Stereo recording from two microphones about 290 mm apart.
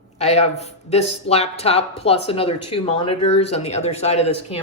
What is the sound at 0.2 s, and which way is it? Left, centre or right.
Speech, left.